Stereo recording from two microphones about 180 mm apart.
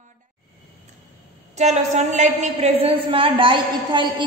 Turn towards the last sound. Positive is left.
turn(degrees=-25)  # may be behind; listen again after turning